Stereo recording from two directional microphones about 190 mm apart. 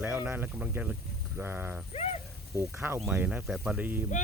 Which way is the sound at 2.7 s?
10° right (ahead or behind).